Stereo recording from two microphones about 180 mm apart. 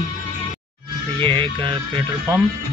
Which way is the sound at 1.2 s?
25° right (ahead or behind).